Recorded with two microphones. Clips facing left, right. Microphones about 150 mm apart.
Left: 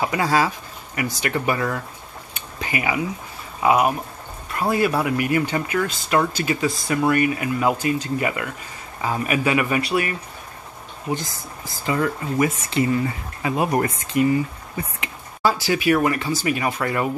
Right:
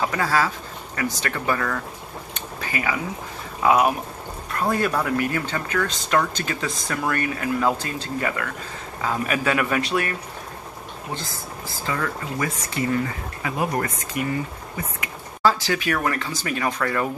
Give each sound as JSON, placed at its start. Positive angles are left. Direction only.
{"t": 0.0, "sound": "speech", "side_deg": 15}
{"t": 3.6, "sound": "speech", "side_deg": 5}
{"t": 11.8, "sound": "speech", "side_deg": 20}
{"t": 15.4, "sound": "speech", "side_deg": 10}